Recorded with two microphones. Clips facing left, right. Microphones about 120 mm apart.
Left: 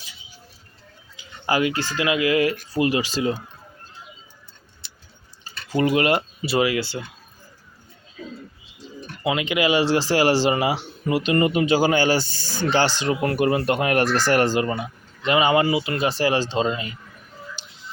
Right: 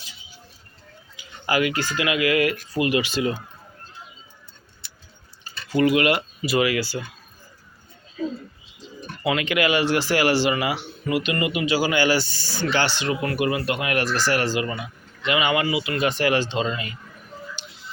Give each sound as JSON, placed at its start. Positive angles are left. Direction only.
{"t": 1.5, "sound": "speech", "side_deg": 30}
{"t": 5.7, "sound": "speech", "side_deg": 35}
{"t": 9.2, "sound": "speech", "side_deg": 20}